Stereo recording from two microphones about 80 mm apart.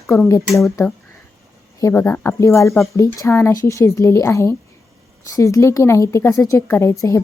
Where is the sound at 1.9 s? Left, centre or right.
Left.